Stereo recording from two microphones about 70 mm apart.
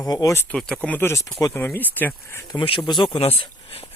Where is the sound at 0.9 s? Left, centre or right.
Left.